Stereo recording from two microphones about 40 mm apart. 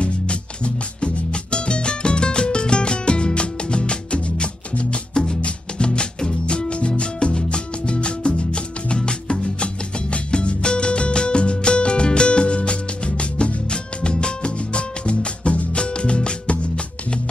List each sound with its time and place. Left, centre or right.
0.0 s music: left
5.1 s music: centre